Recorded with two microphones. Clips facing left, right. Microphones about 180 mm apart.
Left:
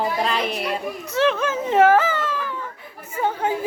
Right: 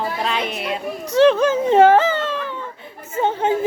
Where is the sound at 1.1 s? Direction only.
30° right (ahead or behind).